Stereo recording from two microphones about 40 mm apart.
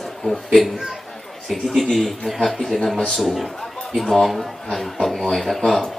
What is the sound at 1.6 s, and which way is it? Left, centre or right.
A man's voice, centre.